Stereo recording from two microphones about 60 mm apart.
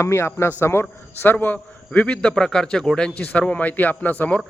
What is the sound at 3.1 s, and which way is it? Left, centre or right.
A man's voice, left.